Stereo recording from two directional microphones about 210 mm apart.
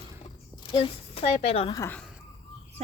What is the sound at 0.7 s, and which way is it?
Speech, 25° left (ahead or behind).